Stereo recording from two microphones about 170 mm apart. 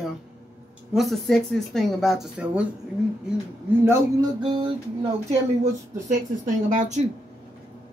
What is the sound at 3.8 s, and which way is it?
Speech, 15° right (ahead or behind).